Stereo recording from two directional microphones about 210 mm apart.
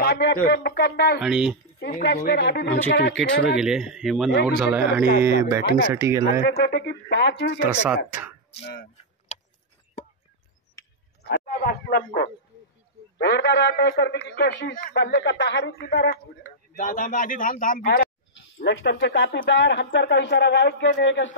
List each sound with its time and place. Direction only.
0.0 s speech: 45° left (ahead or behind)
1.2 s speech: 5° right (ahead or behind)
2.0 s a man's voice: 50° left (ahead or behind)
3.5 s a man's voice: centre (ahead or behind)
6.4 s a man's voice: 55° left (ahead or behind)
7.6 s a man's voice: 5° right (ahead or behind)
11.2 s a man's voice: 45° left (ahead or behind)
16.7 s a man's voice: 40° left (ahead or behind)
18.6 s a man's voice: 55° left (ahead or behind)